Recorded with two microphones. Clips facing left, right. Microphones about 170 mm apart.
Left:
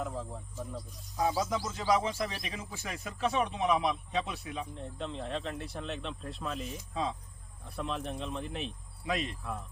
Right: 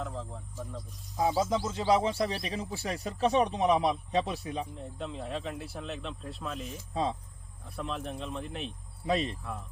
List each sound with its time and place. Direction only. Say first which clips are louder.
0.0 s speech: left 1 dB; 10° left (ahead or behind)
1.1 s music: right 3 dB; 20° right (ahead or behind)
2.0 s speech: right 4 dB; 35° right (ahead or behind)
4.7 s speech: even; centre (ahead or behind)
6.9 s speech: right 4 dB; 40° right (ahead or behind)
7.8 s speech: even; centre (ahead or behind)
9.0 s speech: right 4 dB; 40° right (ahead or behind)
9.4 s speech: left 1 dB; centre (ahead or behind)